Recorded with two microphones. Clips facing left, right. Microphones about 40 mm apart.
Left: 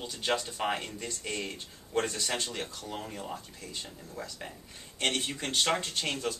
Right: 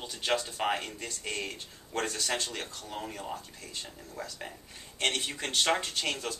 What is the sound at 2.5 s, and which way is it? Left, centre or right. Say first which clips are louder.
Speech: left 1 dB; centre.